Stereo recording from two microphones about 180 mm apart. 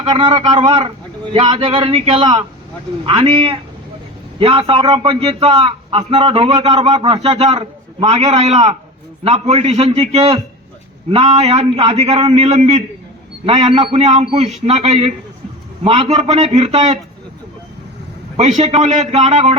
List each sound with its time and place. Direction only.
0.0 s a man's voice: 25° right (ahead or behind)
18.3 s a man's voice: 40° right (ahead or behind)